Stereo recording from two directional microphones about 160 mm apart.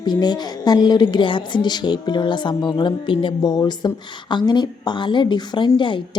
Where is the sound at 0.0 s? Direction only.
25° left (ahead or behind).